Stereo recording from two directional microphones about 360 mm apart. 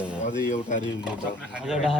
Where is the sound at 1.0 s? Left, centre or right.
Centre.